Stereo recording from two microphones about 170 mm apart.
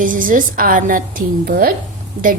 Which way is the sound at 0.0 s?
55° right (ahead or behind).